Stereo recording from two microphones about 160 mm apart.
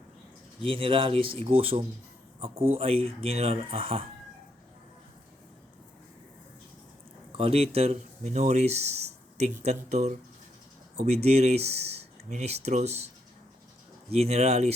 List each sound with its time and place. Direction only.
0.6 s speech: 35° right (ahead or behind)
7.3 s speech: 40° right (ahead or behind)
14.1 s speech: 40° right (ahead or behind)